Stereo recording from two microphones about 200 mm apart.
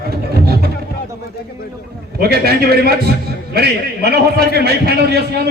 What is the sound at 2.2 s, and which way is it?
A man's voice, 50° right (ahead or behind).